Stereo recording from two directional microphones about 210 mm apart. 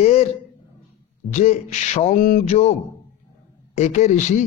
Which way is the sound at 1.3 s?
30° left (ahead or behind).